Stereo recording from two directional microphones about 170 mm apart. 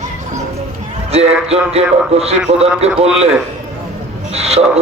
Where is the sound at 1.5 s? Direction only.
35° right (ahead or behind).